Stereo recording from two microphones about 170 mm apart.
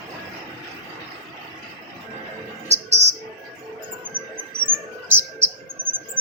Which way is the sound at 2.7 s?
40° right (ahead or behind).